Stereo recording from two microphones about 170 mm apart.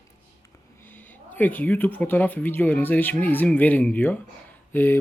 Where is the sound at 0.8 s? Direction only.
10° left (ahead or behind).